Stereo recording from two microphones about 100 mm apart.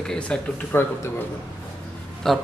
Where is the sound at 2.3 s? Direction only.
5° left (ahead or behind).